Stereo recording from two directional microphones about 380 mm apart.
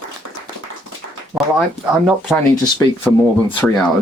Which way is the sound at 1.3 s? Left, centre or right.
Centre.